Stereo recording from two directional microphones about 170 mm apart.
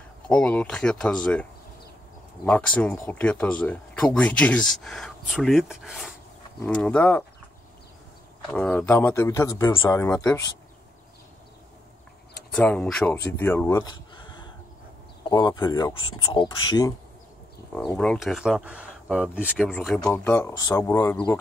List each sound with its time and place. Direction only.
0.3 s speech: 5° left (ahead or behind)
8.5 s speech: 5° left (ahead or behind)
12.4 s speech: 5° left (ahead or behind); by 16.9 s 25° left (ahead or behind)
17.9 s speech: 5° left (ahead or behind)
20.0 s speech: 15° left (ahead or behind)